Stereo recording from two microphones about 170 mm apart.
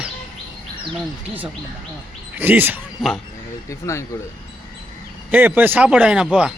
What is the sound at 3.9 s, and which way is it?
Speech, 20° left (ahead or behind).